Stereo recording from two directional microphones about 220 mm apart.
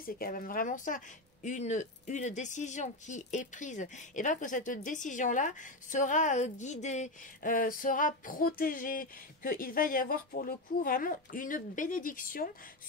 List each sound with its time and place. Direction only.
0.0 s a woman's voice: 40° left (ahead or behind)